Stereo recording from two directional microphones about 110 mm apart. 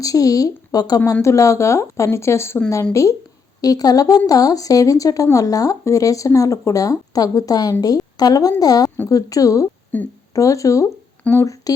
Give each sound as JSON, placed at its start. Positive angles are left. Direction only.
{"t": 0.0, "sound": "speech", "side_deg": 35}
{"t": 9.9, "sound": "a woman's voice", "side_deg": 15}
{"t": 10.3, "sound": "speech", "side_deg": 30}
{"t": 11.2, "sound": "speech", "side_deg": 20}